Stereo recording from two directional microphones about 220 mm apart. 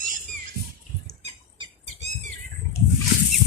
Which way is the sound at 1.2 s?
30° right (ahead or behind).